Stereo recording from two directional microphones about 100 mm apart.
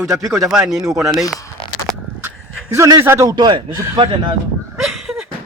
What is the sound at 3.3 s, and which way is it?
Speech, 45° right (ahead or behind).